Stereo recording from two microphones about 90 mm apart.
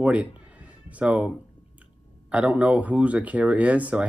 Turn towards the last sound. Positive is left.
turn(degrees=-15)  # may be behind; listen again after turning